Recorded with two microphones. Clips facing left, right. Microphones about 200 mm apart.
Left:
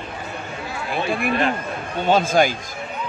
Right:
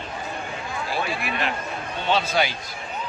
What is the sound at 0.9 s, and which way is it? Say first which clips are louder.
Speech: left 7 dB; 55° left (ahead or behind).